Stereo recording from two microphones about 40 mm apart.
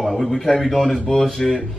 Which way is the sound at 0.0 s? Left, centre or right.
Centre.